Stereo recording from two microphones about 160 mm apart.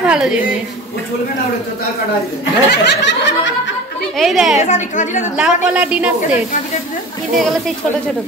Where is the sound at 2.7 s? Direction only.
90° left.